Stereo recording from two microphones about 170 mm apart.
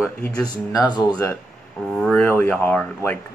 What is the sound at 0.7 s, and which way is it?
Speech, 20° left (ahead or behind).